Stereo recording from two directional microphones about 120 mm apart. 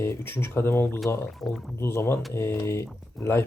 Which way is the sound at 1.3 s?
Centre (ahead or behind).